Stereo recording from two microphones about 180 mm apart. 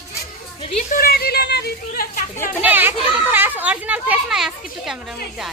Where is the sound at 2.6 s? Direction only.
10° right (ahead or behind).